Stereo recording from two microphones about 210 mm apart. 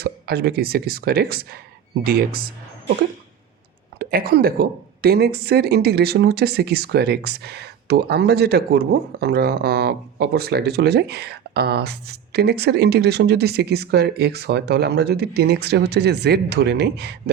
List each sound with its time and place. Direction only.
0.0 s a woman's voice: 50° right (ahead or behind)
3.9 s a woman's voice: 45° right (ahead or behind)